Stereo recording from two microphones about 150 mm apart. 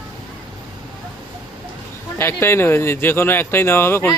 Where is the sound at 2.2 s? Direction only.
15° left (ahead or behind).